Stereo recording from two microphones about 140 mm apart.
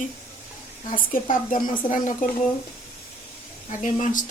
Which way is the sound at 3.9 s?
65° left (ahead or behind).